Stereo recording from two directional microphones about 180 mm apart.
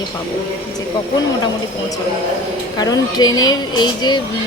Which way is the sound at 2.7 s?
20° left (ahead or behind).